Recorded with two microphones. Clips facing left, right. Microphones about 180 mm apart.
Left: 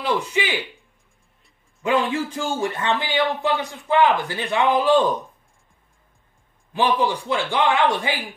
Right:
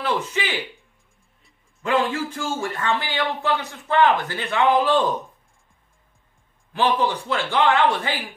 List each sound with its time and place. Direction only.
0.0 s speech: 15° left (ahead or behind)
1.8 s a man's voice: 15° left (ahead or behind)
6.7 s a man's voice: 15° left (ahead or behind)